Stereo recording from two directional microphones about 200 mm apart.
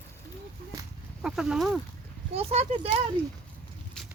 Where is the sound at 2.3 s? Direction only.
30° right (ahead or behind).